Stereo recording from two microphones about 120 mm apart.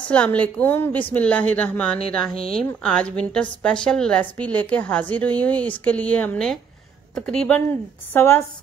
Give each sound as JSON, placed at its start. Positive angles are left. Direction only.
{"t": 0.1, "sound": "a woman's voice", "side_deg": 10}
{"t": 8.1, "sound": "a woman's voice", "side_deg": 20}